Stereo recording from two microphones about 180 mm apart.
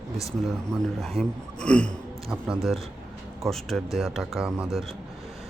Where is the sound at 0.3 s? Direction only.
Centre (ahead or behind).